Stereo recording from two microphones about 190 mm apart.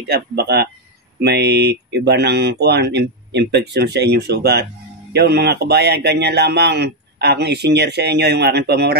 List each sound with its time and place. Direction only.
0.1 s a man's voice: 60° right (ahead or behind)